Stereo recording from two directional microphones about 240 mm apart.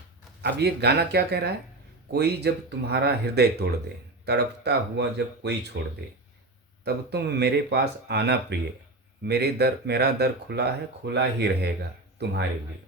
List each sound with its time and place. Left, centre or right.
0.4 s speech: right
6.8 s speech: right